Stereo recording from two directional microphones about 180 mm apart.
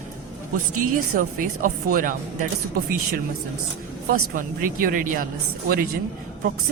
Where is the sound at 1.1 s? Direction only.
50° right (ahead or behind).